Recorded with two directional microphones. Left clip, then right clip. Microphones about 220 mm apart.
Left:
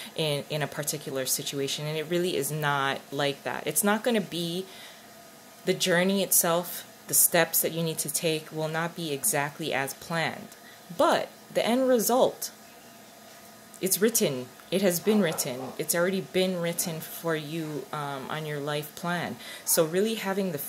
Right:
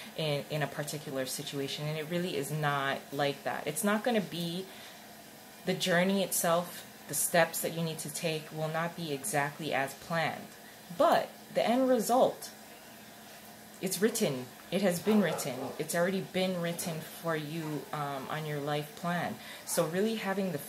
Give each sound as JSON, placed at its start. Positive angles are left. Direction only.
{"t": 0.1, "sound": "speech", "side_deg": 50}
{"t": 5.7, "sound": "speech", "side_deg": 45}
{"t": 13.7, "sound": "speech", "side_deg": 45}